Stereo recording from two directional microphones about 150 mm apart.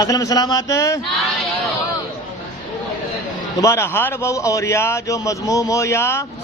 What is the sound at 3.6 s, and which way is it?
A man's voice, 20° left (ahead or behind).